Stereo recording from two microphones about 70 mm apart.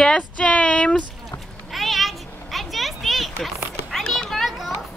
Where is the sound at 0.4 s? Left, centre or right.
Centre.